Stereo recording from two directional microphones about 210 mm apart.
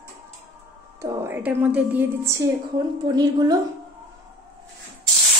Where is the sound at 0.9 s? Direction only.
15° right (ahead or behind).